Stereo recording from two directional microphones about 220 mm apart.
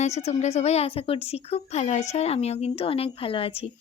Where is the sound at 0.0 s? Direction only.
30° left (ahead or behind).